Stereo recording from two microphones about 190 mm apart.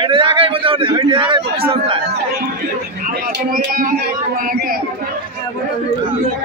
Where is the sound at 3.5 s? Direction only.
50° right (ahead or behind).